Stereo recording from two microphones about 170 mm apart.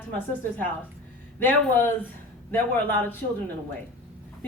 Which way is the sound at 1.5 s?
10° left (ahead or behind).